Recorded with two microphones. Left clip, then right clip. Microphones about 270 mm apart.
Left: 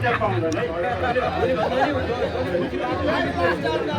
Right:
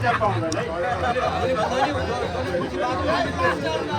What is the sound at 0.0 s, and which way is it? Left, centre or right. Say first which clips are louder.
A man's voice: even; right.